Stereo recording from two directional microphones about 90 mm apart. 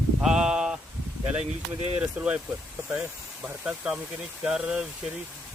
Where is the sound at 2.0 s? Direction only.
15° right (ahead or behind).